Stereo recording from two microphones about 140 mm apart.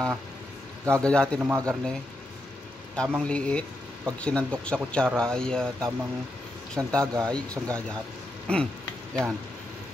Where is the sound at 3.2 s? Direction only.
10° left (ahead or behind).